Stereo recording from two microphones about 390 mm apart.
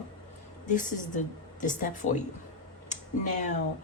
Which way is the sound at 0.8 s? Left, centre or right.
Centre.